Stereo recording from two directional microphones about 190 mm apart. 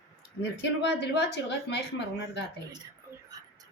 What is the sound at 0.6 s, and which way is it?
A woman's voice, 65° left (ahead or behind).